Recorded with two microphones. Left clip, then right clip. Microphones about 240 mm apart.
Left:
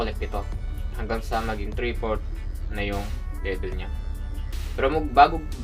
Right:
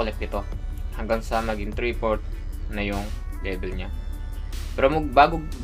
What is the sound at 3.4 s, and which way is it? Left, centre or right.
Speech, right.